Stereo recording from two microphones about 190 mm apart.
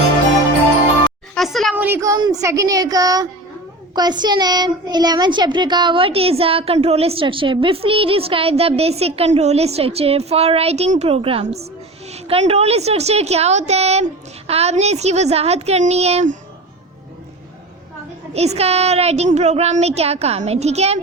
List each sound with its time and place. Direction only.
1.4 s a sound: centre (ahead or behind)
1.7 s child singing: 10° right (ahead or behind)
3.9 s a woman's voice: 20° right (ahead or behind); by 16.4 s 35° right (ahead or behind)
18.3 s a woman's voice: 35° right (ahead or behind)